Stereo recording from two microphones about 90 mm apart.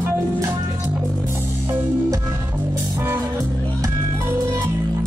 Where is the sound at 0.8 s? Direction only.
25° right (ahead or behind).